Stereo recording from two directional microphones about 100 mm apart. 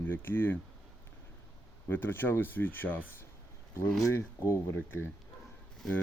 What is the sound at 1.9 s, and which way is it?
Speech, 20° left (ahead or behind).